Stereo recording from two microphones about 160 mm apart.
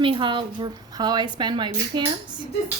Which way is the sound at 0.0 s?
30° right (ahead or behind).